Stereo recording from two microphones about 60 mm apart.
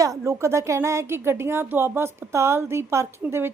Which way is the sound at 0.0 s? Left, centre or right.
Right.